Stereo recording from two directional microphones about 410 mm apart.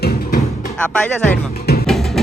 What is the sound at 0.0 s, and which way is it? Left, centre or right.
Music, left.